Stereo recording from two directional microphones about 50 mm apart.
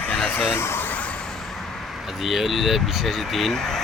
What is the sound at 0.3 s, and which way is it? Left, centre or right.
Speech, left.